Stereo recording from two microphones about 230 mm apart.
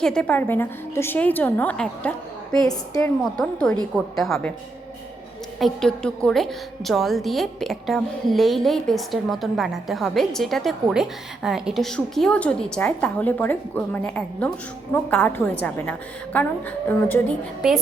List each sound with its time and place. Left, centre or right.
0.0 s a woman's voice: centre
5.5 s a woman's voice: centre